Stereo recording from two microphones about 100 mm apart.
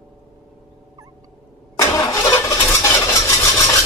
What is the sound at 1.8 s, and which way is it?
Vehicle, 30° left (ahead or behind).